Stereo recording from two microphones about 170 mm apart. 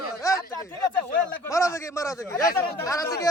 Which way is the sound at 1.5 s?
15° left (ahead or behind).